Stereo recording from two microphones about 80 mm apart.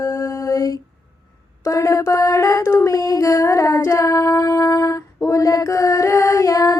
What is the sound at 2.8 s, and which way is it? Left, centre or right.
Female singing, left.